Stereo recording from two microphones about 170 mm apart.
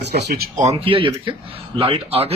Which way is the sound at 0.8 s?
30° right (ahead or behind).